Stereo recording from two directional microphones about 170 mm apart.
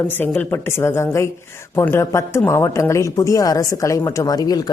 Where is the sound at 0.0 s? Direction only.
10° left (ahead or behind).